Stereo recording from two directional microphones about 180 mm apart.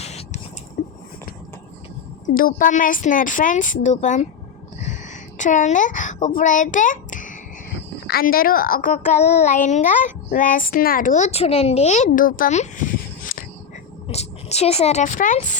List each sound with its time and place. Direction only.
0.0 s a sound: 35° left (ahead or behind)
2.2 s a woman's voice: 50° left (ahead or behind)
4.9 s a sound: 45° left (ahead or behind)
6.2 s speech: 45° left (ahead or behind)
8.0 s a woman's voice: 55° left (ahead or behind)
14.1 s speech: 35° left (ahead or behind)